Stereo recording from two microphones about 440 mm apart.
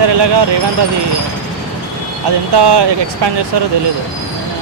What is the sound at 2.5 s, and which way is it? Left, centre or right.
Speech, right.